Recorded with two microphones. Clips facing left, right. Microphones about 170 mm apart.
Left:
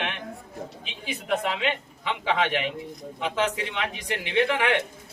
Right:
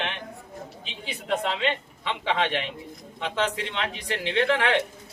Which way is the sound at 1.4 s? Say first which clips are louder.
Right 1 dB; 10° left (ahead or behind).